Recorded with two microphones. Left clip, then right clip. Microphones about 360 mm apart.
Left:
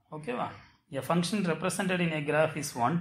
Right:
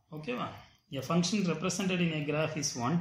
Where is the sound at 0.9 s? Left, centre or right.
Centre.